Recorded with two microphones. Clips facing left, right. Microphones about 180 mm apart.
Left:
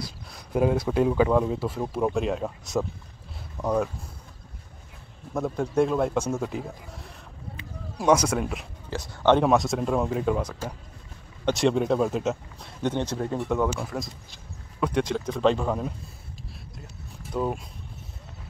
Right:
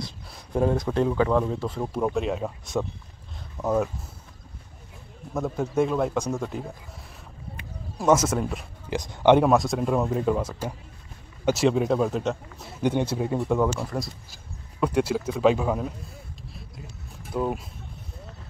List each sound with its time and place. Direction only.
0.3 s speech: 5° left (ahead or behind)
5.3 s speech: centre (ahead or behind)
8.0 s speech: centre (ahead or behind)
8.9 s speech: 20° right (ahead or behind)
9.4 s speech: centre (ahead or behind)
17.3 s speech: centre (ahead or behind)